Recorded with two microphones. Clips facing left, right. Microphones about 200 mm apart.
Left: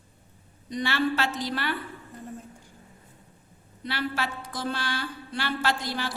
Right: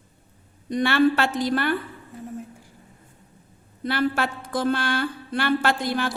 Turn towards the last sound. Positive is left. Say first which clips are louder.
# right 5 dB
turn(degrees=-55)  # may be behind; listen again after turning